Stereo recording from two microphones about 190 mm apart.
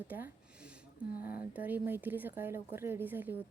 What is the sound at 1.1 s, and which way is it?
Speech, 50° left (ahead or behind).